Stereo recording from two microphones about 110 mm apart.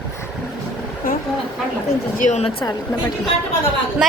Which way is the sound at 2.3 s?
65° left (ahead or behind).